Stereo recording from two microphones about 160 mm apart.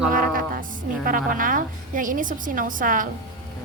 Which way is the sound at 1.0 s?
60° right (ahead or behind).